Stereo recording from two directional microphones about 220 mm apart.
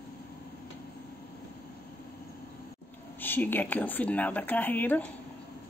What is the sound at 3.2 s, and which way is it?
Speech, 10° left (ahead or behind).